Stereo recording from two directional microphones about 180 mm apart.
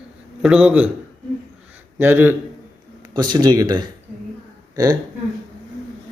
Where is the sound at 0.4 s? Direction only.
5° right (ahead or behind).